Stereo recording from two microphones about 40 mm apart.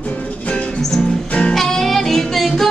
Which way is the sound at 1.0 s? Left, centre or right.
Left.